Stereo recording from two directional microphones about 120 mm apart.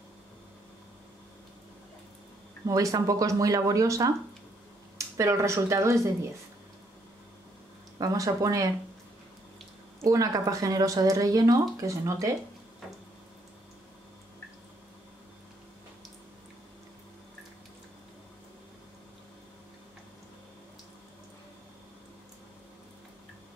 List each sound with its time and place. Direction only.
2.6 s speech: 30° right (ahead or behind)
8.0 s speech: 30° right (ahead or behind)
10.0 s speech: 30° right (ahead or behind)